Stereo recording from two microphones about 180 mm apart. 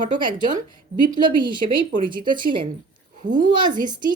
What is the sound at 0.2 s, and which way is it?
Speech, 25° right (ahead or behind).